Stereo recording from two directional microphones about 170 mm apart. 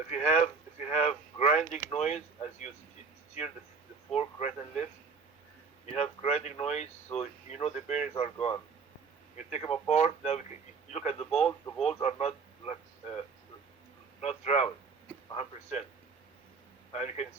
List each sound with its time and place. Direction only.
0.1 s speech: 40° left (ahead or behind)
4.1 s speech: 40° left (ahead or behind)
16.9 s speech: 40° left (ahead or behind)